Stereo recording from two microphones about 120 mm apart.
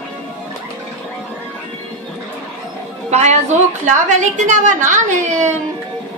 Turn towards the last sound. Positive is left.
turn(degrees=-90)